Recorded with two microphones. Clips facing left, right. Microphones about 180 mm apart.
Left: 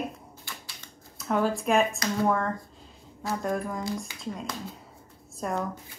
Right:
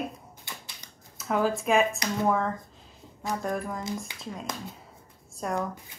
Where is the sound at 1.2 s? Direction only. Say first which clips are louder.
Even; centre (ahead or behind).